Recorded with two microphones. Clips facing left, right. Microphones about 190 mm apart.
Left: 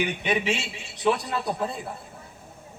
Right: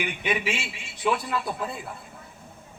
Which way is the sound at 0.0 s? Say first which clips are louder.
Left 2 dB; 40° left (ahead or behind).